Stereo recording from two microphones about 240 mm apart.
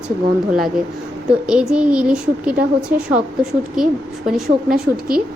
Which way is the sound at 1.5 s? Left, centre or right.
Centre.